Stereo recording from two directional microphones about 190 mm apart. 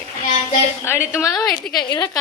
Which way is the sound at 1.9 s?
20° left (ahead or behind).